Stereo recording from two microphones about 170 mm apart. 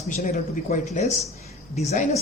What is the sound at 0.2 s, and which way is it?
Speech, 40° left (ahead or behind).